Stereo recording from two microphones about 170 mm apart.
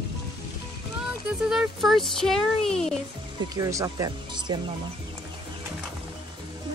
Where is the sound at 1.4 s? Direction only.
Centre (ahead or behind).